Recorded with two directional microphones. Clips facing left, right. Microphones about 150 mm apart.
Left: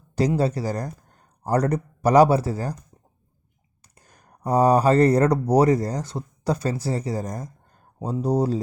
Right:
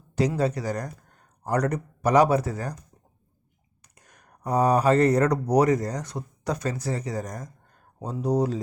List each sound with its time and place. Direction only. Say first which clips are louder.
0.3 s speech: left 2 dB; 30° left (ahead or behind)
3.9 s speech: left 2 dB; 30° left (ahead or behind)